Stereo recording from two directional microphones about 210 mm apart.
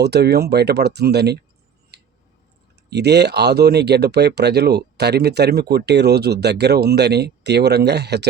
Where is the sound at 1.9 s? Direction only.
50° right (ahead or behind).